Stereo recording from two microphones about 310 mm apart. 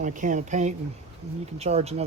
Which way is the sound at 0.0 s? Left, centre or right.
Right.